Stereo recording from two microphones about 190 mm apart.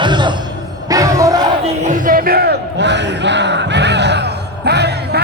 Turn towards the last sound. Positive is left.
turn(degrees=-60)  # may be behind; listen again after turning